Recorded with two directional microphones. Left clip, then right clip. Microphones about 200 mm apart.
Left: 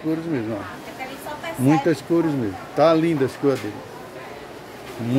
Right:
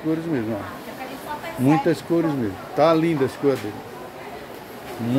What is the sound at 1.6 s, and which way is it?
Speech, 10° left (ahead or behind).